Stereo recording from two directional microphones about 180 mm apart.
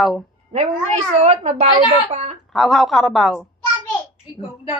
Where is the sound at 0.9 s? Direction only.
35° right (ahead or behind).